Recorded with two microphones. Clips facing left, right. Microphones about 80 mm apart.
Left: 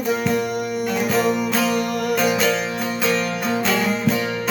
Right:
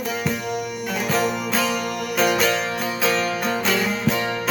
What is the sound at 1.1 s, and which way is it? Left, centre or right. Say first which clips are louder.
Music: left 1 dB; centre.